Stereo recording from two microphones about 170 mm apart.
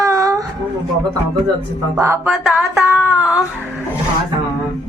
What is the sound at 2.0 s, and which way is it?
Music, 15° right (ahead or behind).